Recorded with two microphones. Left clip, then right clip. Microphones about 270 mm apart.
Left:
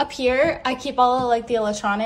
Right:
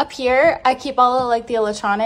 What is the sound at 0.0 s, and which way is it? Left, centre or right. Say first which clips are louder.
A woman's voice: right 4 dB; centre.